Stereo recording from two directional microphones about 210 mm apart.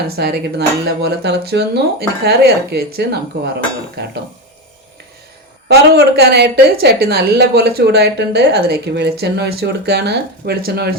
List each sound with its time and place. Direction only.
0.2 s speech: 50° right (ahead or behind)
6.1 s speech: 50° right (ahead or behind)